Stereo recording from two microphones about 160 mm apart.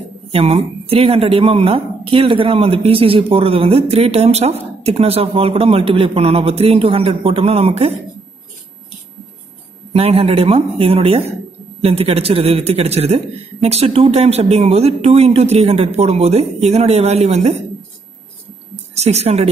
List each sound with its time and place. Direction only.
0.3 s speech: 40° right (ahead or behind)
9.9 s speech: 40° right (ahead or behind)
18.9 s speech: 40° right (ahead or behind)